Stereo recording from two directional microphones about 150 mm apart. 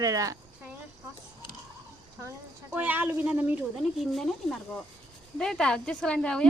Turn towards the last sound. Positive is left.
turn(degrees=5)  # may be behind; listen again after turning